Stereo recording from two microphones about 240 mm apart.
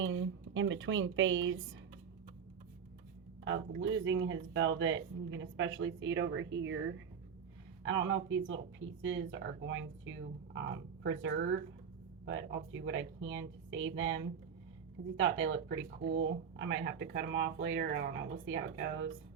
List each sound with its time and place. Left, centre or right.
0.0 s speech: right
3.8 s speech: right
7.9 s speech: right